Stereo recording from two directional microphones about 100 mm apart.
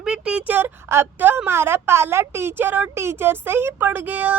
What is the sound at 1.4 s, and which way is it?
Yodeling, 25° right (ahead or behind).